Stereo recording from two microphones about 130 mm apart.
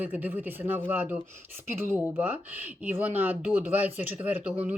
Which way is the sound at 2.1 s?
15° right (ahead or behind).